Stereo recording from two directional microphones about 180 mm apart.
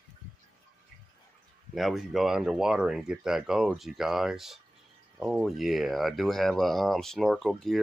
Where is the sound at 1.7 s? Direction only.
Centre (ahead or behind).